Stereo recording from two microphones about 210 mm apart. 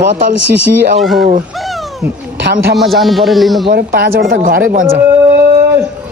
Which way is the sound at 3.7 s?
45° right (ahead or behind).